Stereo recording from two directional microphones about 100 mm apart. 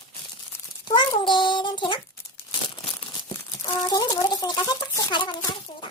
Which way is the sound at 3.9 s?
40° left (ahead or behind).